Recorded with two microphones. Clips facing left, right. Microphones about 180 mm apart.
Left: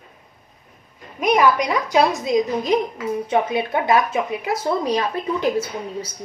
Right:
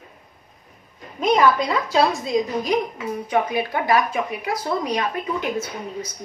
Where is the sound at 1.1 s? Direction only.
10° left (ahead or behind); by 6.1 s 30° left (ahead or behind).